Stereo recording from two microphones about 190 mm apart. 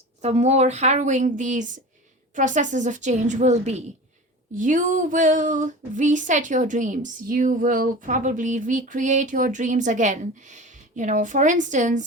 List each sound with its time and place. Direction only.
0.2 s speech: 35° right (ahead or behind)